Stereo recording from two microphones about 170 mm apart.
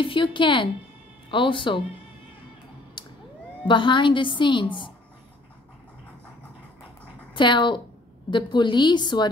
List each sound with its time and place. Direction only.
0.0 s a woman's voice: 30° left (ahead or behind)
3.6 s a woman's voice: 30° left (ahead or behind)
7.3 s a woman's voice: 30° left (ahead or behind)